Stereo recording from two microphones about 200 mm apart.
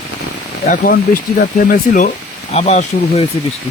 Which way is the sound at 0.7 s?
45° left (ahead or behind).